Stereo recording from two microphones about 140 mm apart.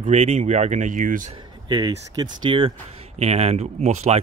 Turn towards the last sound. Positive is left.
turn(degrees=-50)  # may be behind; listen again after turning